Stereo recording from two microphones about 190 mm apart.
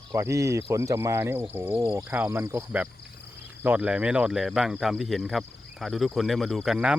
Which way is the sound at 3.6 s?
10° right (ahead or behind).